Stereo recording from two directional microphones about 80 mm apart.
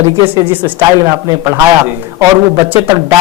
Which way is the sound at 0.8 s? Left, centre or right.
Right.